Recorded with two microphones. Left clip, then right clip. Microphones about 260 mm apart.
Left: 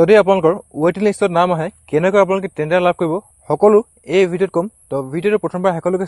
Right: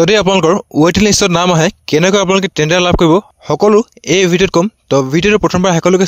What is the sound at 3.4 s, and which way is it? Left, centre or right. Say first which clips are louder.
Speech: even; right.